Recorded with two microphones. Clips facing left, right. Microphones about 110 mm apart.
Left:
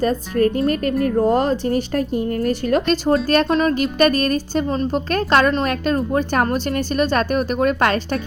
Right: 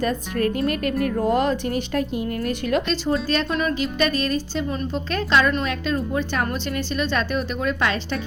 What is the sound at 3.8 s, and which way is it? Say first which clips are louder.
A woman's voice: left 6 dB; 50° left (ahead or behind).